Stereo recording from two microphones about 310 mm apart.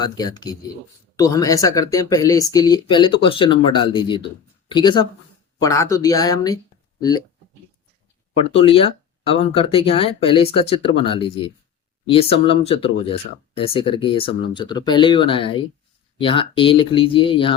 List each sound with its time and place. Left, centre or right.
0.0 s speech: centre
8.5 s speech: centre